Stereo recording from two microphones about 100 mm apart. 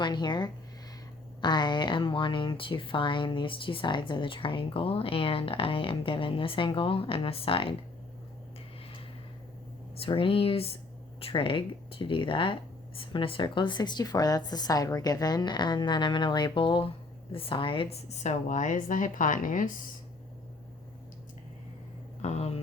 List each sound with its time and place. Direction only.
0.0 s speech: 50° left (ahead or behind); by 7.7 s 65° left (ahead or behind)
10.0 s a woman's voice: 65° left (ahead or behind); by 18.3 s 90° left
22.2 s speech: 90° left